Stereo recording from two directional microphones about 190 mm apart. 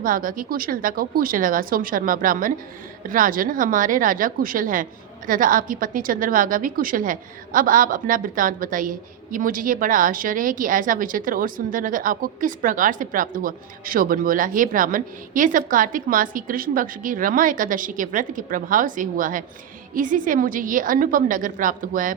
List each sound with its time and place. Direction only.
0.0 s a woman's voice: 45° right (ahead or behind)